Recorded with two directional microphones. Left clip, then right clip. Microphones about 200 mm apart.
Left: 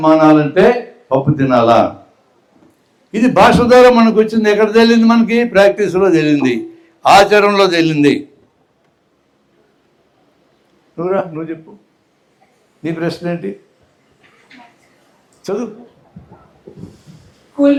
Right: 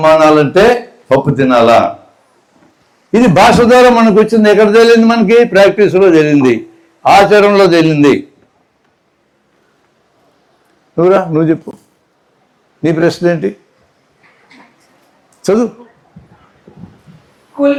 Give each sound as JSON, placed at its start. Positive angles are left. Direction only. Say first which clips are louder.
{"t": 0.2, "sound": "speech", "louder": "right 3 dB", "side_deg": -40}
{"t": 3.1, "sound": "a man's voice", "louder": "right 3 dB", "side_deg": -25}
{"t": 10.9, "sound": "speech", "louder": "right 9 dB", "side_deg": -40}
{"t": 12.8, "sound": "speech", "louder": "right 9 dB", "side_deg": -35}
{"t": 15.4, "sound": "a man's voice", "louder": "right 9 dB", "side_deg": -45}